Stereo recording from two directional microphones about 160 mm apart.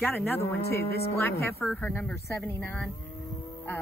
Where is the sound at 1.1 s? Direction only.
15° left (ahead or behind).